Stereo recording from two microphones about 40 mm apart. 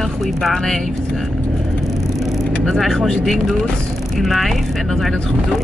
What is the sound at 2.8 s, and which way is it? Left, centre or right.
Speech, centre.